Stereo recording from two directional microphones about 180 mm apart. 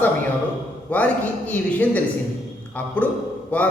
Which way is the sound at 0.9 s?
10° left (ahead or behind).